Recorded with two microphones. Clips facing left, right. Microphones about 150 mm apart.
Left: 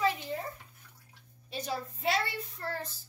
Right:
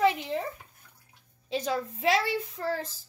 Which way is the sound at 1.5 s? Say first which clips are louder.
Right 7 dB; 90° right.